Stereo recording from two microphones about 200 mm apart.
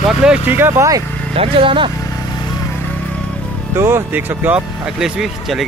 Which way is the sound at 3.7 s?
10° right (ahead or behind).